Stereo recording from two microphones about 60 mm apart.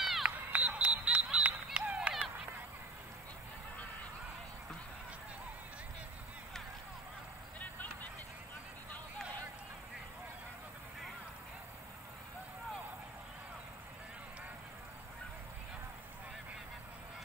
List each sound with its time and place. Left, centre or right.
0.0 s run: centre
0.5 s a sound: right
7.6 s vehicle: left